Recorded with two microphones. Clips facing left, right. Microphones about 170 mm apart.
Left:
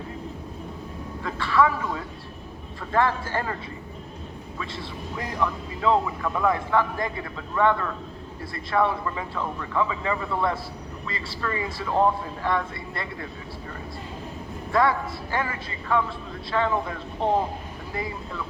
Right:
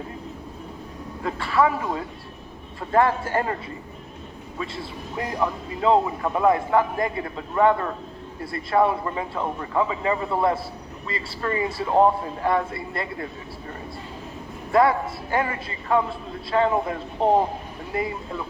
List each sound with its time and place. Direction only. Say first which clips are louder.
1.2 s speech: right 1 dB; 35° right (ahead or behind)
5.1 s speech: right 2 dB; 35° right (ahead or behind)
14.7 s a man's voice: right 4 dB; 30° right (ahead or behind)